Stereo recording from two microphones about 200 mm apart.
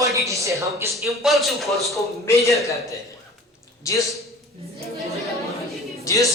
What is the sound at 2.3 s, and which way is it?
Speech, 15° left (ahead or behind).